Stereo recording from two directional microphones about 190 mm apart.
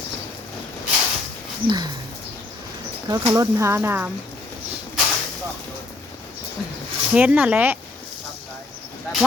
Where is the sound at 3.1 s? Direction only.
15° right (ahead or behind).